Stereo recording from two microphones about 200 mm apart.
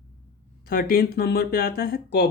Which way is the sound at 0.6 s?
50° left (ahead or behind).